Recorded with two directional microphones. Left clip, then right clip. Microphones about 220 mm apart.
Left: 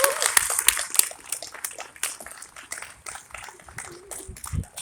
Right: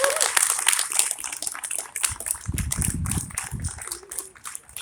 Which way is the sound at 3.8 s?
55° left (ahead or behind).